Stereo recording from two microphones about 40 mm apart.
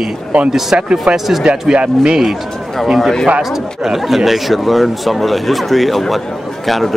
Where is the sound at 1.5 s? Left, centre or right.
Right.